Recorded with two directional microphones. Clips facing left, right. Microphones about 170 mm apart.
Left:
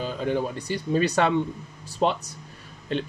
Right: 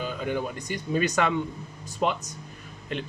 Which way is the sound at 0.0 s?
30° left (ahead or behind).